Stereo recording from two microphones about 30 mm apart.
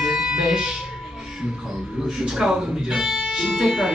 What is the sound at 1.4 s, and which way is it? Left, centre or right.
Speech, right.